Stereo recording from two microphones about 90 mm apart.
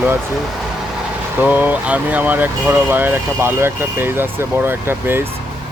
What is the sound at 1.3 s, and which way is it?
Speech, 20° right (ahead or behind).